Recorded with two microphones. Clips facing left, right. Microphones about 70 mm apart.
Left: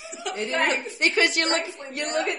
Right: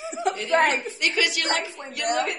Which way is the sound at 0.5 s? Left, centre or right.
Right.